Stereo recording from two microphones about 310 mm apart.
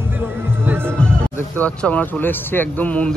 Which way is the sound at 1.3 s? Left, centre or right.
Centre.